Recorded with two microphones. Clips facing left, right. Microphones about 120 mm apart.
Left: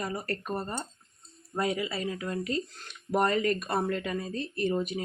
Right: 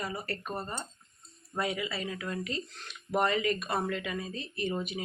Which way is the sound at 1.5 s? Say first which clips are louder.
Left 3 dB; 35° left (ahead or behind).